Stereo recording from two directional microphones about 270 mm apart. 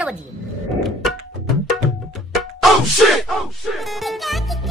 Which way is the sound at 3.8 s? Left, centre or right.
Centre.